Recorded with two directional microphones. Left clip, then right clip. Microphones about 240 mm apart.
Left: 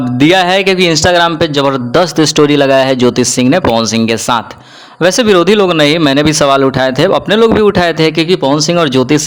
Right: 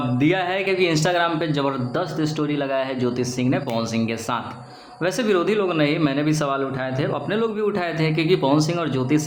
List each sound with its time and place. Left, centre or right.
0.2 s a man's voice: left